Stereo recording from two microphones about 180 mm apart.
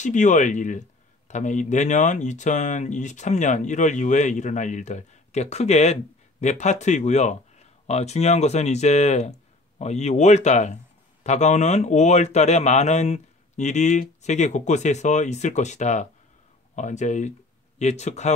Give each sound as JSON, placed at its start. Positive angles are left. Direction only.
{"t": 0.0, "sound": "speech", "side_deg": 45}